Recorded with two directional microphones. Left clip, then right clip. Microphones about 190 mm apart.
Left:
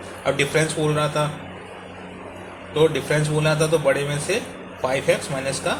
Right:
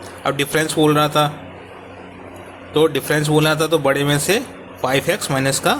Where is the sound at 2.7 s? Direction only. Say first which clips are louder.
Right 3 dB; 60° right (ahead or behind).